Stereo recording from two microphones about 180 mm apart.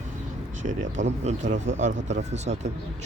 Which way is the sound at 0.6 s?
45° right (ahead or behind).